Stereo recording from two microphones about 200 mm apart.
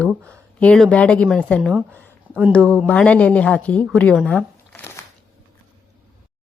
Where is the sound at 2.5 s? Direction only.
5° left (ahead or behind).